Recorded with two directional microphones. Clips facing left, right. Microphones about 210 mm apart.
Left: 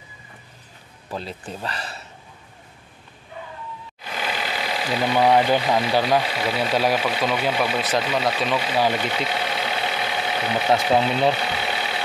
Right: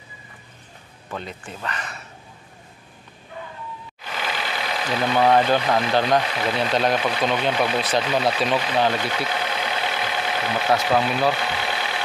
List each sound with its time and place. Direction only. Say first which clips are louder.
1.1 s speech: left 2 dB; 35° left (ahead or behind)
4.4 s speech: left 1 dB; 10° left (ahead or behind)
9.3 s vehicle: even; 5° left (ahead or behind)
10.9 s speech: left 1 dB; 25° left (ahead or behind)
11.3 s vehicle: even; 5° left (ahead or behind)